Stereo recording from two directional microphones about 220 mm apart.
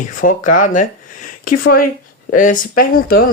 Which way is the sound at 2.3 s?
35° left (ahead or behind).